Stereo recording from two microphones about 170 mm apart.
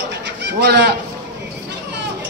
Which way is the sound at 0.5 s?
80° right.